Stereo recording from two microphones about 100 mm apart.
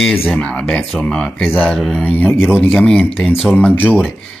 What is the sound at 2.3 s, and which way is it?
Speech, 20° left (ahead or behind).